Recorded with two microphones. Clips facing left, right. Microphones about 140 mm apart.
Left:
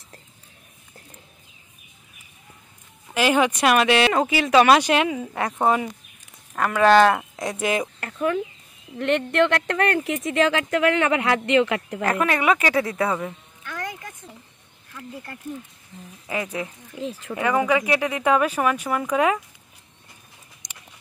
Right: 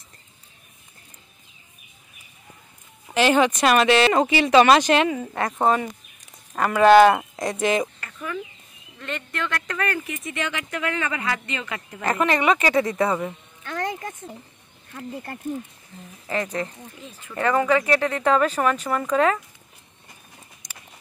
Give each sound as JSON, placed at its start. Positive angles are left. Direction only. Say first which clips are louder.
{"t": 3.2, "sound": "speech", "louder": "right 1 dB", "side_deg": 10}
{"t": 6.5, "sound": "speech", "louder": "right 2 dB", "side_deg": -5}
{"t": 7.3, "sound": "speech", "louder": "right 2 dB", "side_deg": 5}
{"t": 8.0, "sound": "speech", "louder": "left 8 dB", "side_deg": 65}
{"t": 10.0, "sound": "speech", "louder": "left 9 dB", "side_deg": 90}
{"t": 12.0, "sound": "speech", "louder": "right 2 dB", "side_deg": 5}
{"t": 13.7, "sound": "music", "louder": "right 5 dB", "side_deg": -25}
{"t": 16.3, "sound": "speech", "louder": "right 2 dB", "side_deg": 10}
{"t": 17.0, "sound": "speech", "louder": "left 15 dB", "side_deg": 90}
{"t": 17.4, "sound": "speech", "louder": "right 1 dB", "side_deg": 10}